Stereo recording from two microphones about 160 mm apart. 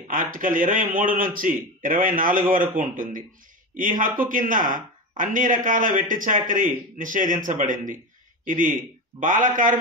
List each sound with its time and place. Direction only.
0.1 s speech: 60° right (ahead or behind)